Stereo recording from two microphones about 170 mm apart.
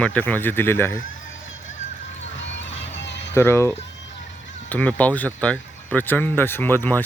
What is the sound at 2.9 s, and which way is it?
Children playing, 90° left.